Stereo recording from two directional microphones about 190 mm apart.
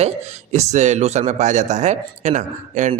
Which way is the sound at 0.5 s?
35° right (ahead or behind).